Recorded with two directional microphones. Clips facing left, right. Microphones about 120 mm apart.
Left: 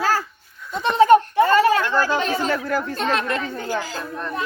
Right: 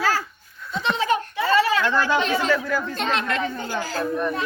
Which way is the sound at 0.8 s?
50° left (ahead or behind).